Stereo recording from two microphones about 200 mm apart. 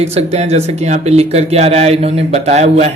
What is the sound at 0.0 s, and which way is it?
Speech, 30° right (ahead or behind).